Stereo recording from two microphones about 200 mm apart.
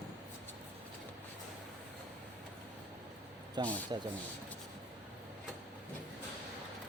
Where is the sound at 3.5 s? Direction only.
20° right (ahead or behind).